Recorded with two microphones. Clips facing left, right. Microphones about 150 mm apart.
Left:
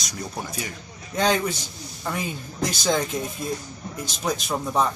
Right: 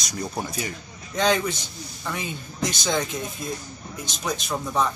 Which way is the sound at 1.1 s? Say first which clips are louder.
Even; 5° left (ahead or behind).